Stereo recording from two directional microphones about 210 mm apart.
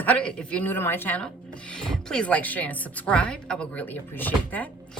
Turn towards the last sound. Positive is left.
turn(degrees=5)  # may be behind; listen again after turning